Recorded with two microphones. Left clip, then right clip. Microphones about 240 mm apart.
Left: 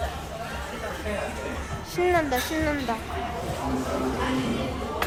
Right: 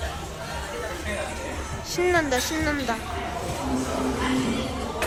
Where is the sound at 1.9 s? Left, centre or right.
Centre.